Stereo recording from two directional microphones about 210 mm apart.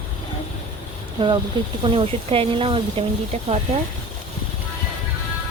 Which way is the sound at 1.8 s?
25° right (ahead or behind).